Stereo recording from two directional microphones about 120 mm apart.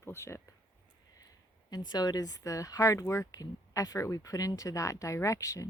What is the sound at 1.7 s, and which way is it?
Speech, 35° left (ahead or behind).